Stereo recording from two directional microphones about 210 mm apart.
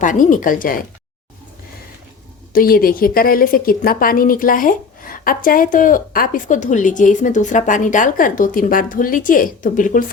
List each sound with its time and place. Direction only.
0.0 s a woman's voice: 40° left (ahead or behind)
2.5 s a woman's voice: 45° left (ahead or behind)